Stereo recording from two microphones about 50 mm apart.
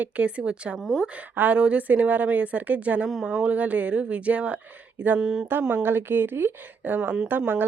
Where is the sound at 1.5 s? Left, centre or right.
Right.